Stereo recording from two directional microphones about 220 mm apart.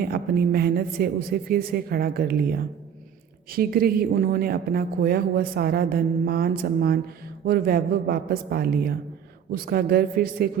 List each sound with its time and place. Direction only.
0.0 s speech: 45° right (ahead or behind)